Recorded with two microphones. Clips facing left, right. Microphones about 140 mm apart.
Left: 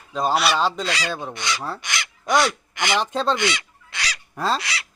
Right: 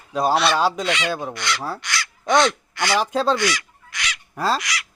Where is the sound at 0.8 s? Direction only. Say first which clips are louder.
Right 3 dB; 35° left (ahead or behind).